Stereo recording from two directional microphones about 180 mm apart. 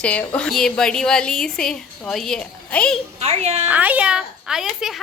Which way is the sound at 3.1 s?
35° right (ahead or behind).